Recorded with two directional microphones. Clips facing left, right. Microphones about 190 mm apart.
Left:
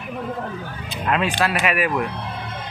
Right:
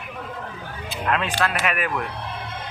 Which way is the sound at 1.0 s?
10° left (ahead or behind).